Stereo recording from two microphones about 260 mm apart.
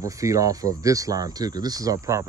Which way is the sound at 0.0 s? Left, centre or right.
Centre.